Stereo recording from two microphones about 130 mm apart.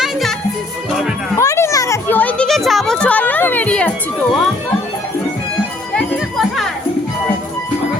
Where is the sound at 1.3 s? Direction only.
25° left (ahead or behind).